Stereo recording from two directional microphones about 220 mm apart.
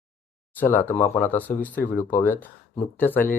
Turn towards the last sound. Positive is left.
turn(degrees=10)  # may be behind; listen again after turning